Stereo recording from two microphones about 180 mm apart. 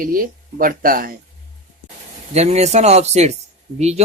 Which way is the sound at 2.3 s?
35° right (ahead or behind).